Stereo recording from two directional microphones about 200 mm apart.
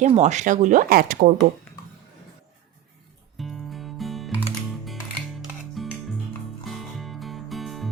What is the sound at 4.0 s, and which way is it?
Music, centre (ahead or behind).